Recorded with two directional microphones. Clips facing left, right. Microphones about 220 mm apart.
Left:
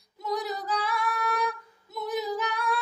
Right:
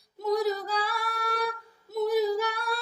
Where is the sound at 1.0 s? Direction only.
40° right (ahead or behind).